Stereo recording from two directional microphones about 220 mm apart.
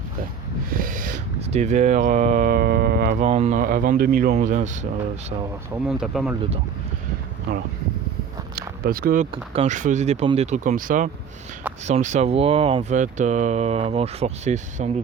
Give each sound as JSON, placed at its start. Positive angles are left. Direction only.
{"t": 0.7, "sound": "speech", "side_deg": -40}
{"t": 5.9, "sound": "speech", "side_deg": 0}
{"t": 8.5, "sound": "a sound", "side_deg": -40}
{"t": 9.3, "sound": "speech", "side_deg": -25}